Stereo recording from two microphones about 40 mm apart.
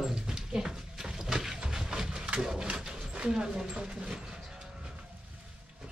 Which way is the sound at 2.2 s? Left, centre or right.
Right.